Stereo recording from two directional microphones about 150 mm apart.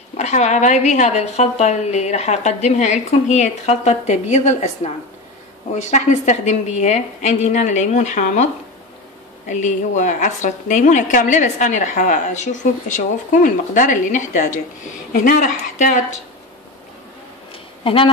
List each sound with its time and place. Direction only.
0.2 s a woman's voice: 50° left (ahead or behind)
9.5 s a woman's voice: 55° left (ahead or behind)
17.8 s speech: 35° left (ahead or behind)